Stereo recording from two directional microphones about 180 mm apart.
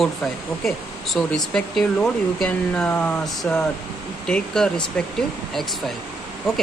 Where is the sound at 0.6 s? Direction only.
Centre (ahead or behind).